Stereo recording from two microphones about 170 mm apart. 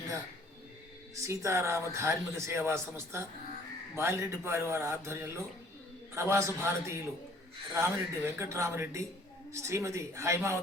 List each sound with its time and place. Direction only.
1.1 s a man's voice: 20° right (ahead or behind)